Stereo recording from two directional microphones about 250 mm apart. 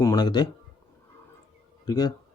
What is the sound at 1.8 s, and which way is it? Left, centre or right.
Speech, centre.